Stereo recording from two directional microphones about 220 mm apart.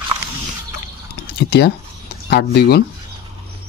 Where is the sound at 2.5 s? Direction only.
45° left (ahead or behind).